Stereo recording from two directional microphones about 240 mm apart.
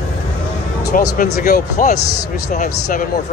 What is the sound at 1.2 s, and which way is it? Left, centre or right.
Speech, left.